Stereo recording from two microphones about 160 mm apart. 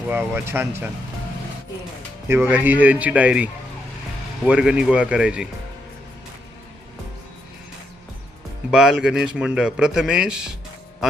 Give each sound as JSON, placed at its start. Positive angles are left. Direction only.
{"t": 0.1, "sound": "a man's voice", "side_deg": -15}
{"t": 2.2, "sound": "a man's voice", "side_deg": -15}
{"t": 8.7, "sound": "speech", "side_deg": -5}